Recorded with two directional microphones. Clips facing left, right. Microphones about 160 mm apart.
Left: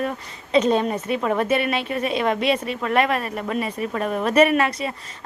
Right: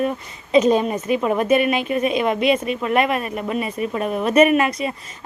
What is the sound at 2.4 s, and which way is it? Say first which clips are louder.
Speech: right 3 dB; 35° left (ahead or behind).